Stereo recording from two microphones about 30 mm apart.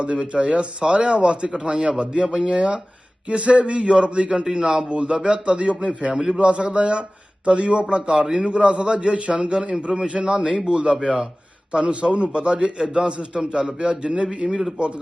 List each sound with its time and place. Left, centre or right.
0.0 s a man's voice: right
2.2 s a man's voice: right
4.4 s a man's voice: right
9.5 s a man's voice: right
11.7 s a man's voice: right